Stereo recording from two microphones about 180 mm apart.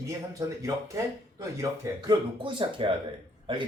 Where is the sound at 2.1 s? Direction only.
25° right (ahead or behind).